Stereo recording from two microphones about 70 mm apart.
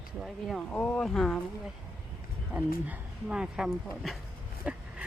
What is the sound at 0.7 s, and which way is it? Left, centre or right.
Speech, left.